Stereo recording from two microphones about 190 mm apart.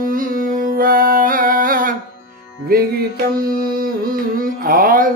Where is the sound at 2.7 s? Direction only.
50° right (ahead or behind).